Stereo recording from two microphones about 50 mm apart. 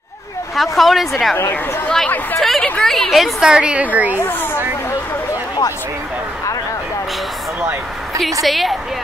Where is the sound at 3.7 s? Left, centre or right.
Right.